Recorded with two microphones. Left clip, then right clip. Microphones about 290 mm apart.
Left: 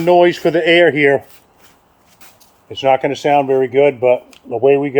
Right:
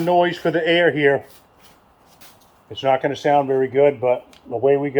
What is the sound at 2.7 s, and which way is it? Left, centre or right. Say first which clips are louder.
Speech: left 5 dB; left.